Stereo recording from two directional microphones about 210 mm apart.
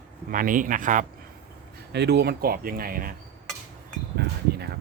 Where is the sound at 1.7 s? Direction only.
50° right (ahead or behind).